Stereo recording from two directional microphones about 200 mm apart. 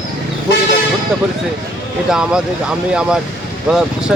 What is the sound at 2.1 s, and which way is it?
A man's voice, 5° right (ahead or behind).